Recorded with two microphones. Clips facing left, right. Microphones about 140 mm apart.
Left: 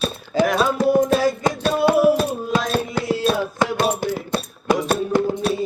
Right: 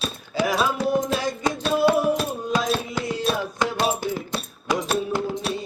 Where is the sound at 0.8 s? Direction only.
55° left (ahead or behind).